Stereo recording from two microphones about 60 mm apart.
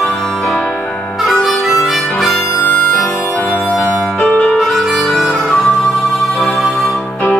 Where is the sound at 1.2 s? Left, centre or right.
Centre.